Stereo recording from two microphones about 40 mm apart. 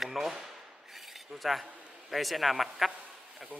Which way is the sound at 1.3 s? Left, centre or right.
Centre.